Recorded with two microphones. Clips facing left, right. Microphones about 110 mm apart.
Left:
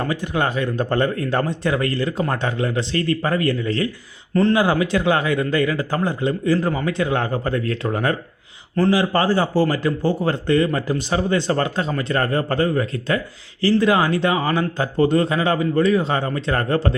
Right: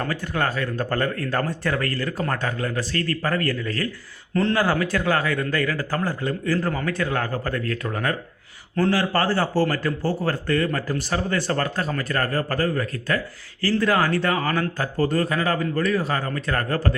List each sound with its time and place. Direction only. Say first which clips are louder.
0.0 s a man's voice: left 3 dB; 15° left (ahead or behind)
8.7 s a man's voice: left 3 dB; 10° left (ahead or behind)